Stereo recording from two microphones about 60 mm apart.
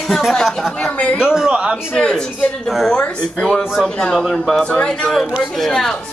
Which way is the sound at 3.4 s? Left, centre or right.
Centre.